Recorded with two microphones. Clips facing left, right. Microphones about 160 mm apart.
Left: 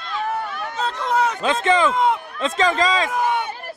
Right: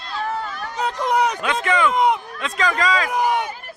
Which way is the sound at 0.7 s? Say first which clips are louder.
Right 2 dB; 15° right (ahead or behind).